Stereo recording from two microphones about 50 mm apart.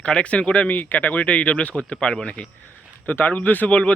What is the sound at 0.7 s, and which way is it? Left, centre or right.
Speech, left.